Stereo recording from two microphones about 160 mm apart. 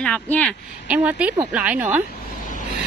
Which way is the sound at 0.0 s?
10° left (ahead or behind).